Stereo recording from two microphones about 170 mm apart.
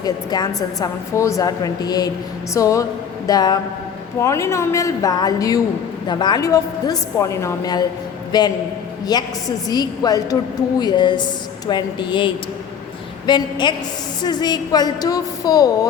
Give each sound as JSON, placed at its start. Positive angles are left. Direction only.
{"t": 0.0, "sound": "a woman's voice", "side_deg": 25}